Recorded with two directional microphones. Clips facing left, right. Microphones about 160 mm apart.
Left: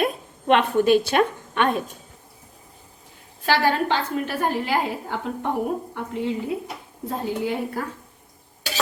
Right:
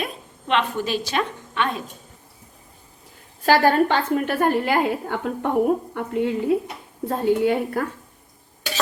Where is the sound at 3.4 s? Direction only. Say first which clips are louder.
Right 4 dB; 45° right (ahead or behind).